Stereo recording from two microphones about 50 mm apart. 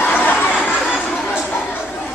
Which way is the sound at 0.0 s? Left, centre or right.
Left.